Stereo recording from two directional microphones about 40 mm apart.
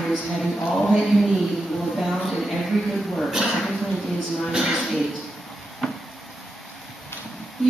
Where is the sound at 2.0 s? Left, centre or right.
Centre.